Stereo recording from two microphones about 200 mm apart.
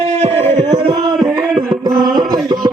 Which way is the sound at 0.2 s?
30° right (ahead or behind).